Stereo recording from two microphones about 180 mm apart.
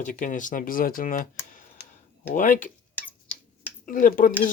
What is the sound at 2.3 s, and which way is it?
Speech, 45° left (ahead or behind).